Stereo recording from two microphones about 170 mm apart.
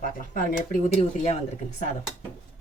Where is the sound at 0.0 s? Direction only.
50° left (ahead or behind).